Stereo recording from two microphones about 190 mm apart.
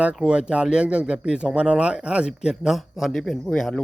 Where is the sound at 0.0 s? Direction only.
5° right (ahead or behind).